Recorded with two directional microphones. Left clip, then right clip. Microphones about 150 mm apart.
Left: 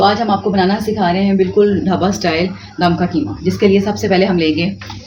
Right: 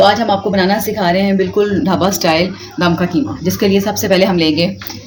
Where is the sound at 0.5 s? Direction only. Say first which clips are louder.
Right 1 dB; 55° right (ahead or behind).